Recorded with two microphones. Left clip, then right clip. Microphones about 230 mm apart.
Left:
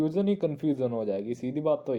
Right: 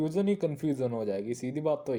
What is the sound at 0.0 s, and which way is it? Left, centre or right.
Speech, right.